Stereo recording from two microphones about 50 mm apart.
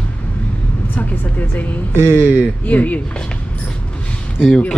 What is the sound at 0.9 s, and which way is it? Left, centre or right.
Vehicle, left.